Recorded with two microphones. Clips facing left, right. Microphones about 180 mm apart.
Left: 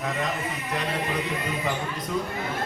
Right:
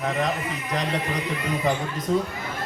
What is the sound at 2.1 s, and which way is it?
Speech, 35° right (ahead or behind).